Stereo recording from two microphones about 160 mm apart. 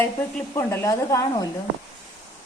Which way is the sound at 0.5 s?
15° left (ahead or behind).